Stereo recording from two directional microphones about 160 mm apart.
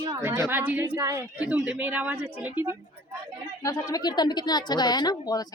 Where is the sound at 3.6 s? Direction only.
25° left (ahead or behind).